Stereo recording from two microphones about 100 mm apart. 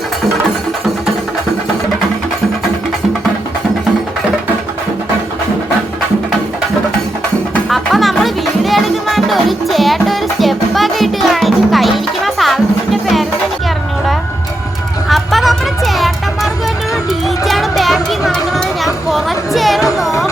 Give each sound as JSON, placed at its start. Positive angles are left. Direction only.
{"t": 7.7, "sound": "music", "side_deg": 0}
{"t": 15.1, "sound": "music", "side_deg": 0}
{"t": 17.2, "sound": "chatter", "side_deg": 0}
{"t": 19.0, "sound": "music", "side_deg": 0}
{"t": 20.1, "sound": "music", "side_deg": 30}